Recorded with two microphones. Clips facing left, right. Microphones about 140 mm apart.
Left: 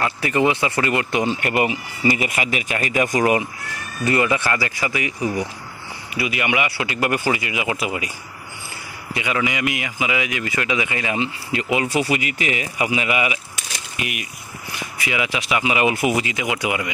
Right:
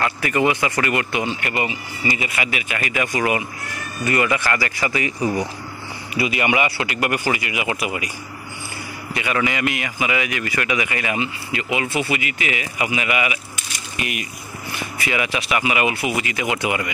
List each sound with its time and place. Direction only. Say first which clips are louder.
0.2 s speech: left 1 dB; 25° left (ahead or behind)
1.6 s speech: left 4 dB; 50° left (ahead or behind)
4.0 s speech: left 1 dB; 25° left (ahead or behind); by 5.1 s 10° left (ahead or behind)
6.1 s speech: right 2 dB; 5° left (ahead or behind)
6.4 s a man's voice: right 1 dB; 35° right (ahead or behind)
6.9 s speech: left 1 dB; 25° left (ahead or behind)
9.1 s speech: right 1 dB; 15° left (ahead or behind)
13.9 s speech: right 2 dB; 10° left (ahead or behind)
15.9 s speech: left 4 dB; 45° left (ahead or behind)
16.3 s speech: right 1 dB; 15° left (ahead or behind)